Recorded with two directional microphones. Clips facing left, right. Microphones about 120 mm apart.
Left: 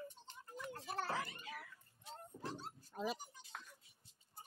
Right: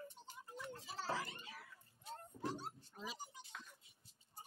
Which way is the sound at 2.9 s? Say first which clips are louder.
Left 7 dB; 55° left (ahead or behind).